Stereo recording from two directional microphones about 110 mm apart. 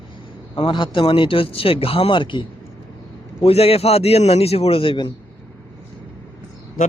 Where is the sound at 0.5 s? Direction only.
50° left (ahead or behind).